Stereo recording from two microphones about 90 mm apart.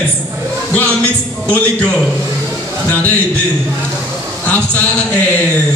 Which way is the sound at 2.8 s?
20° left (ahead or behind).